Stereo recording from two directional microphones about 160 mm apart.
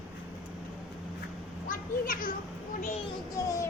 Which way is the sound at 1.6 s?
60° left (ahead or behind).